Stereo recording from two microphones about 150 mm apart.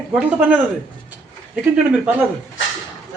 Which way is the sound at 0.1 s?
10° right (ahead or behind).